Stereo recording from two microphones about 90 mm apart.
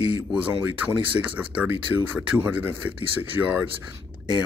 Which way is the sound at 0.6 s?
15° right (ahead or behind).